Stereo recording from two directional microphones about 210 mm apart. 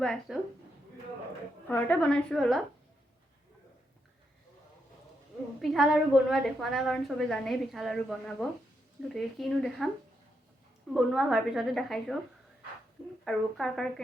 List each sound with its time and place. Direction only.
0.0 s a woman's voice: 5° left (ahead or behind)
1.6 s a woman's voice: 5° left (ahead or behind)
5.6 s a woman's voice: centre (ahead or behind)
10.9 s a woman's voice: centre (ahead or behind)
13.2 s a woman's voice: centre (ahead or behind)